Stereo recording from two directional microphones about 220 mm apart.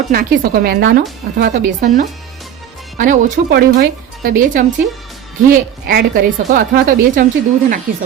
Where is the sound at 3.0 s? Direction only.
35° right (ahead or behind).